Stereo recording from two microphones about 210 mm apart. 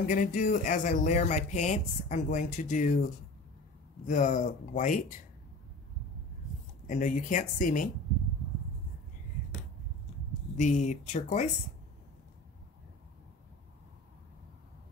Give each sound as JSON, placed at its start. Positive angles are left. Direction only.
{"t": 0.0, "sound": "speech", "side_deg": 40}
{"t": 4.1, "sound": "speech", "side_deg": 35}
{"t": 6.9, "sound": "speech", "side_deg": 35}
{"t": 10.6, "sound": "speech", "side_deg": 35}